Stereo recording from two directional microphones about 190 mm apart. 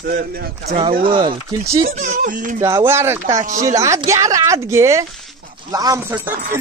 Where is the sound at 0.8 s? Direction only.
25° right (ahead or behind); by 2.5 s 45° right (ahead or behind).